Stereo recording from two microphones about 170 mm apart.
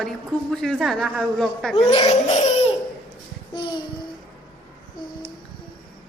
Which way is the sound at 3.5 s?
25° left (ahead or behind).